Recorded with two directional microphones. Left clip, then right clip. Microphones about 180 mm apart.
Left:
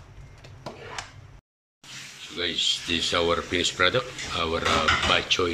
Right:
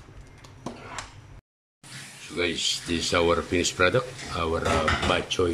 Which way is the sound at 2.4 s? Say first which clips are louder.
Left 1 dB; 10° right (ahead or behind).